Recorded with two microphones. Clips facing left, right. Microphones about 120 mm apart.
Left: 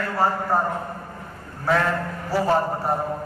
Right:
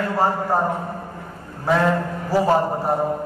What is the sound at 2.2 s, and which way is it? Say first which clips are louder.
Speech: right 3 dB; 15° right (ahead or behind).